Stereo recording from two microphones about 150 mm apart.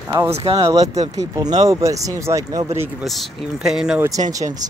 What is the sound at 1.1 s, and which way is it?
Speech, 25° right (ahead or behind).